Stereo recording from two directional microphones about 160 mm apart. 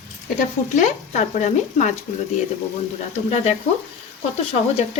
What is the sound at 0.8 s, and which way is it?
Speech, 50° left (ahead or behind).